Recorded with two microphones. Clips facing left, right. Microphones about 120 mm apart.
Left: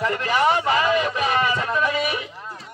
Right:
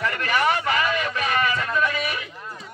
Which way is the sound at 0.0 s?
25° left (ahead or behind).